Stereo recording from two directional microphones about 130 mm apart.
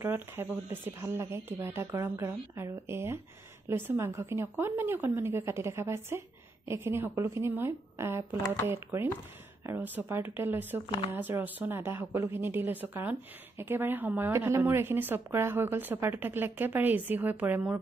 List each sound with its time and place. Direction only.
0.0 s speech: 15° right (ahead or behind)